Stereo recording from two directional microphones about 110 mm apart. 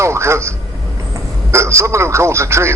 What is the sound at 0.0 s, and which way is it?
Speech, 25° right (ahead or behind).